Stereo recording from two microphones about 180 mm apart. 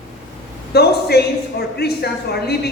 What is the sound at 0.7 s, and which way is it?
A man's voice, 60° left (ahead or behind).